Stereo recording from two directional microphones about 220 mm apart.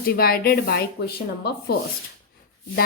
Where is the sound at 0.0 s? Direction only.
45° left (ahead or behind).